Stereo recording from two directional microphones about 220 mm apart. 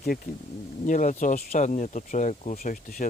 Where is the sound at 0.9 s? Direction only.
35° left (ahead or behind).